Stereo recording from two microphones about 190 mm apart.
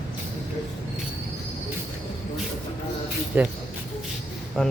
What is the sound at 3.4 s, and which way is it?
Speech, 10° right (ahead or behind).